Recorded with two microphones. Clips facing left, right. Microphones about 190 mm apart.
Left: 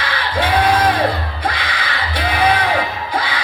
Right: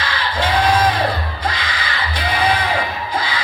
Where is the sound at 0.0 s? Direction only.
60° left (ahead or behind).